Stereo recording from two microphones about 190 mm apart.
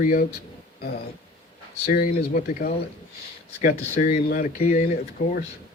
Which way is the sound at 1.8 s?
45° left (ahead or behind).